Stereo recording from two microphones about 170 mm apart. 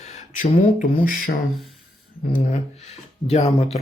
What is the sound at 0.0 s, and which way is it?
Speech, 40° left (ahead or behind).